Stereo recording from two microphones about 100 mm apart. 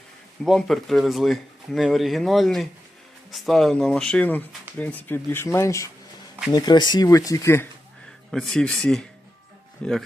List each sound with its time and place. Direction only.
0.4 s speech: centre (ahead or behind); by 5.9 s 30° left (ahead or behind)
6.5 s speech: 45° left (ahead or behind); by 7.7 s 25° left (ahead or behind)
8.3 s speech: 5° left (ahead or behind)